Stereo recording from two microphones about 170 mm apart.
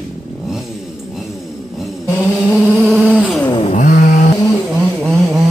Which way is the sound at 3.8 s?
55° left (ahead or behind).